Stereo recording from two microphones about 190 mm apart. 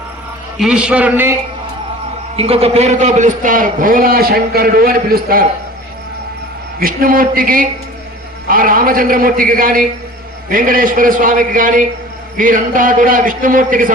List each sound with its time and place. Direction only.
0.6 s a man's voice: 5° right (ahead or behind)
2.3 s a man's voice: 30° right (ahead or behind); by 5.4 s 50° right (ahead or behind)
6.7 s a man's voice: 50° right (ahead or behind)